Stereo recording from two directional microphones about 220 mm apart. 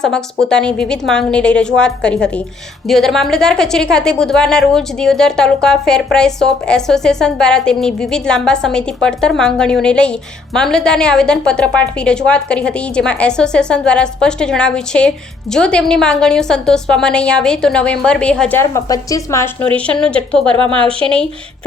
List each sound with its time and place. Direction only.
0.0 s a woman's voice: 5° left (ahead or behind)
20.6 s a woman's voice: 25° right (ahead or behind)
21.0 s a woman's voice: 5° left (ahead or behind)